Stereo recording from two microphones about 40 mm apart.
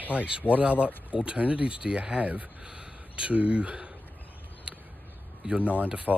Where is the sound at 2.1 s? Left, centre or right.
Right.